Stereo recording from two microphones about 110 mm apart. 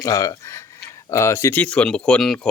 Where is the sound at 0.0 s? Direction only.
30° left (ahead or behind).